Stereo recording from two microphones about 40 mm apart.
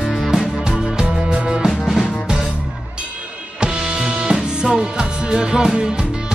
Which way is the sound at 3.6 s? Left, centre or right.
Right.